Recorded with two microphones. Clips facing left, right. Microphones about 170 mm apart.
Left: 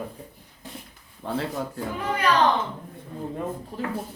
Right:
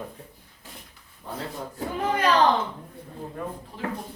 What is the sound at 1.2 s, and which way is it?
Speech, 70° left (ahead or behind).